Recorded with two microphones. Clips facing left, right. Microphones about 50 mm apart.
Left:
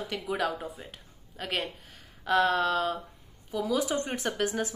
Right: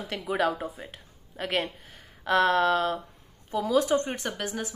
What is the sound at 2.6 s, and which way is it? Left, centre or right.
Speech, right.